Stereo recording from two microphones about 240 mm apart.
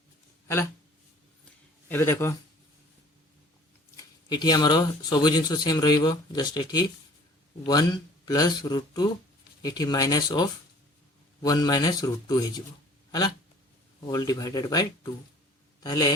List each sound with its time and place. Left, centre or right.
0.4 s speech: centre
1.9 s speech: centre
3.9 s speech: centre
13.1 s a sound: centre
14.1 s speech: centre